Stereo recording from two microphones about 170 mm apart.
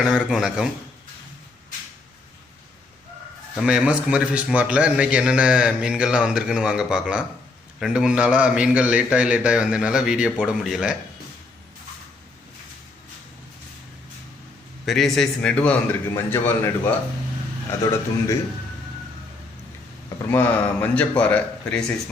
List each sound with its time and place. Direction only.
0.0 s a man's voice: 5° right (ahead or behind)
3.5 s a man's voice: 5° right (ahead or behind)
14.8 s a man's voice: centre (ahead or behind); by 18.3 s 15° left (ahead or behind)
20.3 s a man's voice: 10° left (ahead or behind)